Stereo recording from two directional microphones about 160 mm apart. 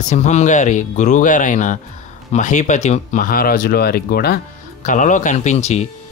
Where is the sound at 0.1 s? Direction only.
45° left (ahead or behind); by 4.4 s 75° left (ahead or behind).